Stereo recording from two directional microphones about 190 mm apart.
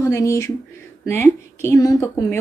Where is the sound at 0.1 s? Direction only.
15° left (ahead or behind).